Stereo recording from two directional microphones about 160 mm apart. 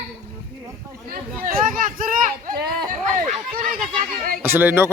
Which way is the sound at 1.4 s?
60° right (ahead or behind).